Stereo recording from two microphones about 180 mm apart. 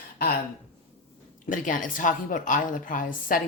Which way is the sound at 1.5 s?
45° left (ahead or behind).